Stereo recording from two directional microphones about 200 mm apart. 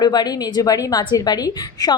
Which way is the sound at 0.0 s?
20° left (ahead or behind).